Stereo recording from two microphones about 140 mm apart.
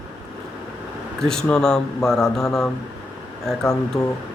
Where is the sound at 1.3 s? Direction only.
5° left (ahead or behind).